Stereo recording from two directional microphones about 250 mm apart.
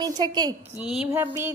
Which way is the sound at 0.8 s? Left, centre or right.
Centre.